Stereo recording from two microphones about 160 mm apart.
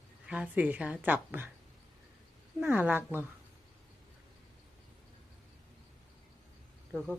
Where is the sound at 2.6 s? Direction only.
10° right (ahead or behind).